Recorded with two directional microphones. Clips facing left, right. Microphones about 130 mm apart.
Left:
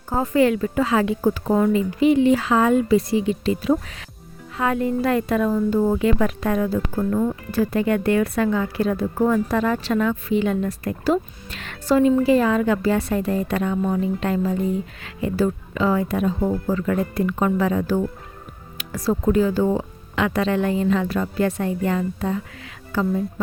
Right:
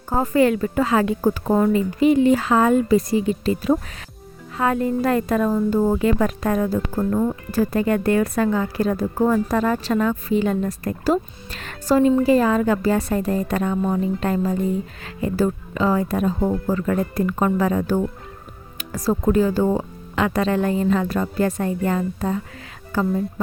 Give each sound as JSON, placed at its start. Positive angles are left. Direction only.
{"t": 0.1, "sound": "a woman's voice", "side_deg": -40}
{"t": 18.8, "sound": "music", "side_deg": -40}
{"t": 19.3, "sound": "a woman's voice", "side_deg": -40}